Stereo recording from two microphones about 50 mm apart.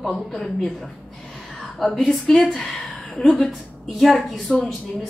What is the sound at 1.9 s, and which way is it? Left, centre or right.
A woman's voice, centre.